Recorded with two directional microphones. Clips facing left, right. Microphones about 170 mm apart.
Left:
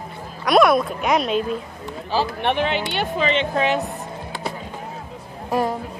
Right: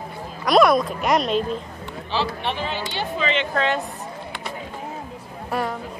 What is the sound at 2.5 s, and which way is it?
Speech, 65° left (ahead or behind).